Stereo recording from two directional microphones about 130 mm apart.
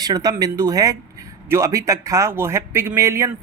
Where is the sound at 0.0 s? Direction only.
30° right (ahead or behind).